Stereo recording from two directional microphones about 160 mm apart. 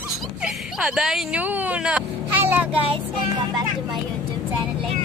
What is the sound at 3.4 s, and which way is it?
Speech, 25° right (ahead or behind).